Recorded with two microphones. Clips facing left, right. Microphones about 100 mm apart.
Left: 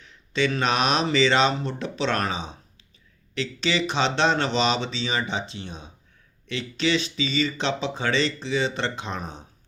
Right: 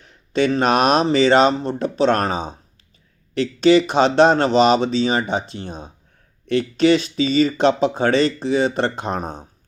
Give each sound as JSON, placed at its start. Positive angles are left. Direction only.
{"t": 0.0, "sound": "speech", "side_deg": -45}